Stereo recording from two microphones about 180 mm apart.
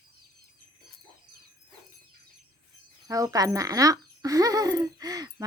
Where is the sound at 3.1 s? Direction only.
20° right (ahead or behind).